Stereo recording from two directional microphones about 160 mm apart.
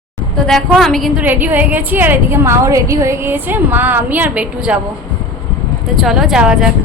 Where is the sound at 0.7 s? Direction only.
Centre (ahead or behind).